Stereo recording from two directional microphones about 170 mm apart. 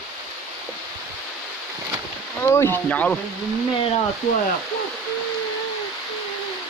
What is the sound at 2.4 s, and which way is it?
Speech, 15° left (ahead or behind).